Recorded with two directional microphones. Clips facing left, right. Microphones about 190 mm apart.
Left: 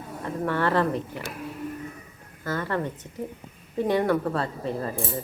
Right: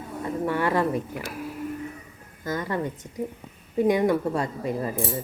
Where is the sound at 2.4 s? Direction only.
15° right (ahead or behind).